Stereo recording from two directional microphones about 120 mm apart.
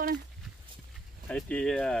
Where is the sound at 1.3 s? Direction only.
10° left (ahead or behind).